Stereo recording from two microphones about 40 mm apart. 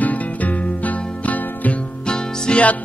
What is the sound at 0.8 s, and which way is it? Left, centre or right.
Music, left.